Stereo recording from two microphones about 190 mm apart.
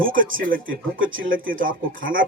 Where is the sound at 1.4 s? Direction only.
45° right (ahead or behind).